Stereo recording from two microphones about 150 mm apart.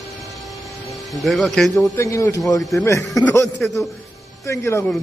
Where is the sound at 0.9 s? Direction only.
Centre (ahead or behind).